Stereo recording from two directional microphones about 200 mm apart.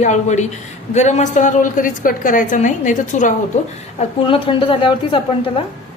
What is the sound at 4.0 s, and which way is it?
A woman's voice, 25° left (ahead or behind).